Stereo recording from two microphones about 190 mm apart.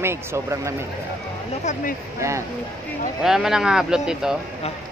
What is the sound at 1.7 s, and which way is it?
Speech, 40° left (ahead or behind).